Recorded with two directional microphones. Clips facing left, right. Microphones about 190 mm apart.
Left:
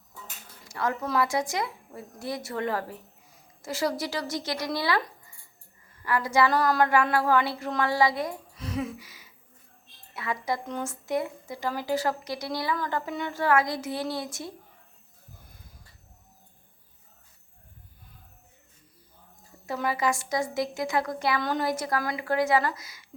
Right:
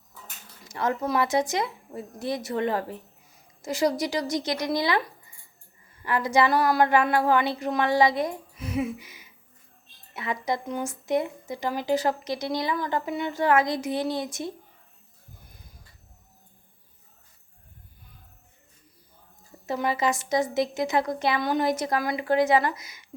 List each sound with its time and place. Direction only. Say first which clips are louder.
0.7 s speech: right 2 dB; 20° right (ahead or behind)
8.5 s music: right 4 dB; 10° right (ahead or behind)
10.2 s speech: right 2 dB; 20° right (ahead or behind)
19.6 s speech: right 2 dB; 20° right (ahead or behind)